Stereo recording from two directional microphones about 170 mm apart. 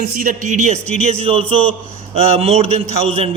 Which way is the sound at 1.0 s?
40° right (ahead or behind).